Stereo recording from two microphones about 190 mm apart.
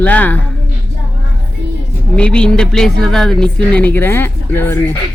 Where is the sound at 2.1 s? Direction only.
5° left (ahead or behind).